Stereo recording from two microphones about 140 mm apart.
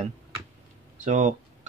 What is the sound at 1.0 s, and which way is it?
Speech, 60° right (ahead or behind).